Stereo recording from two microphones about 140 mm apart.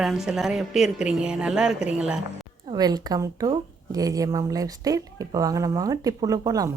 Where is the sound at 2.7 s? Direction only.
30° right (ahead or behind).